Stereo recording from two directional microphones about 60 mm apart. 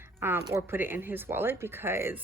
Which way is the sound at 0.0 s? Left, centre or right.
Right.